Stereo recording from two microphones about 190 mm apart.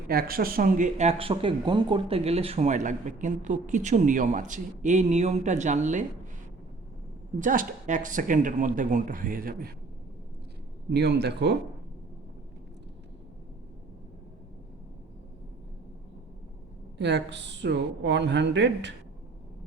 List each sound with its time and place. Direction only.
0.1 s speech: 50° right (ahead or behind)
7.3 s speech: 45° right (ahead or behind)
10.8 s speech: 60° right (ahead or behind)
17.0 s speech: 65° right (ahead or behind)